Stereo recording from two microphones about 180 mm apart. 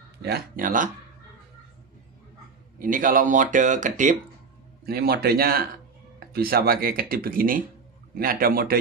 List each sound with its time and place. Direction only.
0.2 s speech: 55° right (ahead or behind)
2.8 s speech: 50° right (ahead or behind)
4.8 s speech: 60° right (ahead or behind)